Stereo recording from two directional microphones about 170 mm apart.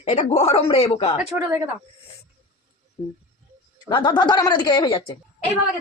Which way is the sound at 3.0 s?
25° left (ahead or behind).